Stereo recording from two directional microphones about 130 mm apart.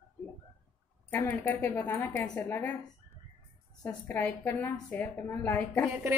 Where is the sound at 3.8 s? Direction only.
15° left (ahead or behind).